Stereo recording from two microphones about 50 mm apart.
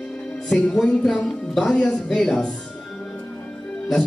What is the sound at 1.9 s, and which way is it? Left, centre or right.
Speech, left.